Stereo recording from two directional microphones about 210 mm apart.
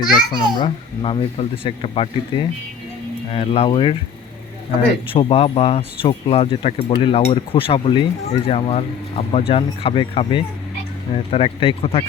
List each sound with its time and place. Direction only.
0.0 s speech: 20° left (ahead or behind)
5.0 s speech: 25° left (ahead or behind)